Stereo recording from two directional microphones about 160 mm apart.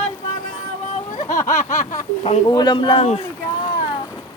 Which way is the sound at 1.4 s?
50° left (ahead or behind).